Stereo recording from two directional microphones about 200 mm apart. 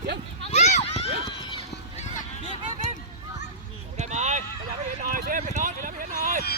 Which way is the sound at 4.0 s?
35° right (ahead or behind).